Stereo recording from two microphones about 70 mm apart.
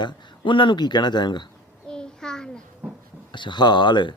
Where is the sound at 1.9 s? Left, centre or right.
Centre.